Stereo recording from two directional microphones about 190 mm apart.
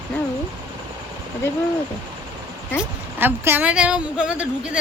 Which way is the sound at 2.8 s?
10° right (ahead or behind).